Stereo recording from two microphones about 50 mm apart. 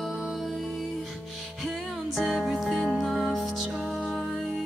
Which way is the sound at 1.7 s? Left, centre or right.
Centre.